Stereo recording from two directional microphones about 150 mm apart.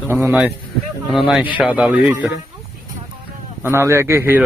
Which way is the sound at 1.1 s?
5° right (ahead or behind).